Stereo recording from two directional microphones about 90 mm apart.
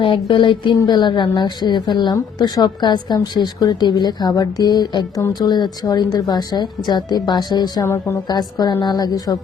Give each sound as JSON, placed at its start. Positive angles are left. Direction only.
{"t": 0.0, "sound": "a woman's voice", "side_deg": 70}
{"t": 7.9, "sound": "a woman's voice", "side_deg": 30}
{"t": 8.3, "sound": "a woman's voice", "side_deg": 45}